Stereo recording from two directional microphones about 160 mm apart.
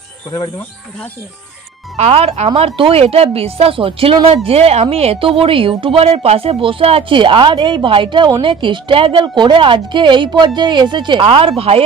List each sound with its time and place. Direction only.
2.0 s a woman's voice: 40° right (ahead or behind)